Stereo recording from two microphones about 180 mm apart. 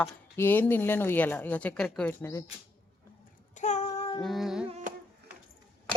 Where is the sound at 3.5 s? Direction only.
40° left (ahead or behind).